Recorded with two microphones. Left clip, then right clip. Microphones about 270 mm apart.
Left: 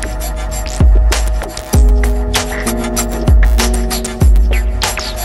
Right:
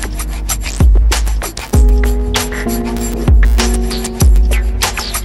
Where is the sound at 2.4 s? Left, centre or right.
Centre.